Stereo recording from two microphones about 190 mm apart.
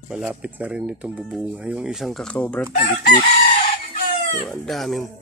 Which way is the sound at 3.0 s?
55° left (ahead or behind).